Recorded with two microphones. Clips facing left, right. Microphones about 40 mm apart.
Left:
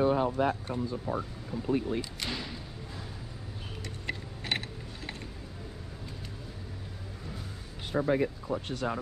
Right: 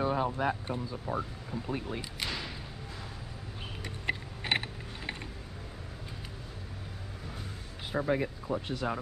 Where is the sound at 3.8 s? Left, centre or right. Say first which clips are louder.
Right 4 dB; right.